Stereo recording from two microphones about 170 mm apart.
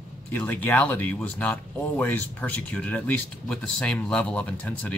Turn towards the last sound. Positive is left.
turn(degrees=10)  # may be behind; listen again after turning